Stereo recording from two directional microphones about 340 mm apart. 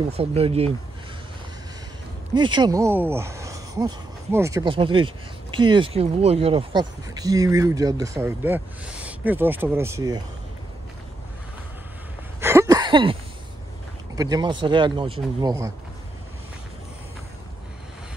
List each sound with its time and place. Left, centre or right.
0.2 s speech: centre
2.3 s speech: centre
12.4 s a sound: centre
14.1 s speech: centre